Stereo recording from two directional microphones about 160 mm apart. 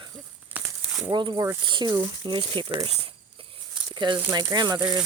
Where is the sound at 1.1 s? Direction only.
25° right (ahead or behind).